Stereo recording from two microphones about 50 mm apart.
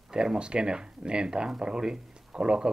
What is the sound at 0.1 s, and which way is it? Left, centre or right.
Speech, centre.